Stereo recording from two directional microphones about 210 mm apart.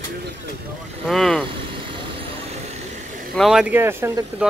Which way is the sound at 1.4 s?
25° right (ahead or behind).